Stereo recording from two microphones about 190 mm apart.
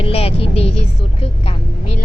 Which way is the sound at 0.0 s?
30° left (ahead or behind).